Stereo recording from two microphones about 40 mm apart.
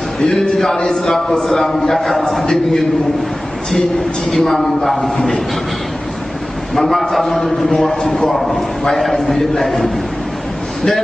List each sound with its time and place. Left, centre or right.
0.2 s a man's voice: centre
4.3 s a man's voice: centre
6.7 s a man's voice: centre